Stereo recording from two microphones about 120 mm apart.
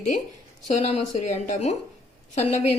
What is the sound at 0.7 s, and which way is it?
Speech, 65° left (ahead or behind).